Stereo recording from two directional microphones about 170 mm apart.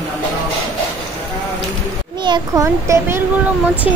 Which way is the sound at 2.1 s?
25° right (ahead or behind).